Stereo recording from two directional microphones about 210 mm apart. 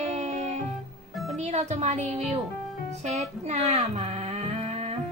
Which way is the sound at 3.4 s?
30° right (ahead or behind).